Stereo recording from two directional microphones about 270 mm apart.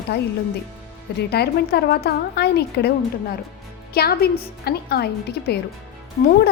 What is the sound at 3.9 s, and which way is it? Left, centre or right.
A woman's voice, left.